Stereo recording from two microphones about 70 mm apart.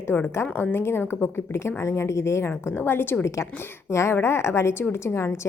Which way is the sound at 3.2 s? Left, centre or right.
Left.